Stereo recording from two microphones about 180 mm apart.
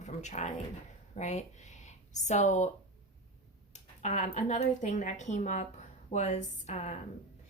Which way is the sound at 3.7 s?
40° left (ahead or behind).